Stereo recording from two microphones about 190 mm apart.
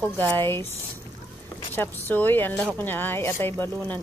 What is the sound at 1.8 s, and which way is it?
Speech, 10° left (ahead or behind).